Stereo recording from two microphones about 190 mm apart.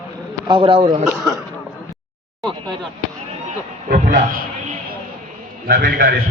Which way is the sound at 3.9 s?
40° right (ahead or behind).